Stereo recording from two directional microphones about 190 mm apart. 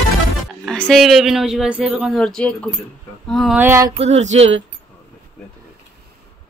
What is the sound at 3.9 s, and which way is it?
Speech, 35° right (ahead or behind).